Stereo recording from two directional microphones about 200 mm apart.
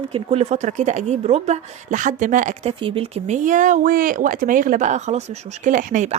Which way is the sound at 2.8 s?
30° right (ahead or behind).